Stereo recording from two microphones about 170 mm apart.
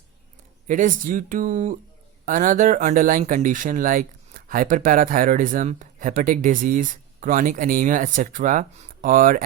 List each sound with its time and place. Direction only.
0.7 s speech: 50° right (ahead or behind)